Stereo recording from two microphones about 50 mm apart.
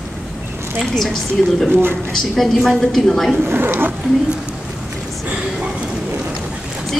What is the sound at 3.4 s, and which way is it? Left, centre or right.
Speech, right.